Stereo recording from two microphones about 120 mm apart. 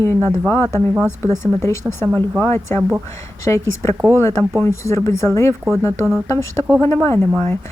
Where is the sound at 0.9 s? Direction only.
20° right (ahead or behind).